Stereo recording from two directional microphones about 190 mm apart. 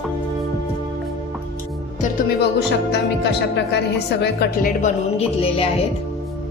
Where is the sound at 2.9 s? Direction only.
65° left (ahead or behind).